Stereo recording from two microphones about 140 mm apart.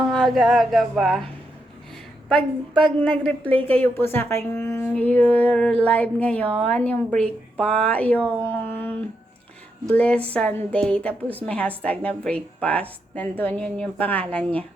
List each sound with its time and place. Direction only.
0.1 s speech: centre (ahead or behind)
2.3 s a woman's voice: 5° left (ahead or behind)
6.4 s a woman's voice: 45° right (ahead or behind)
6.7 s a woman's voice: 10° left (ahead or behind)